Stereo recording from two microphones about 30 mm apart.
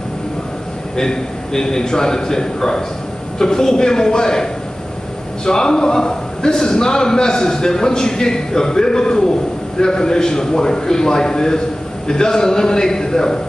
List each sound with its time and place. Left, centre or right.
0.9 s a man's voice: left